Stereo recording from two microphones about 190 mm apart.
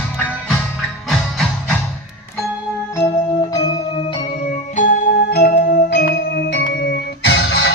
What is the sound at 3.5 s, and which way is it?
Music, 25° left (ahead or behind).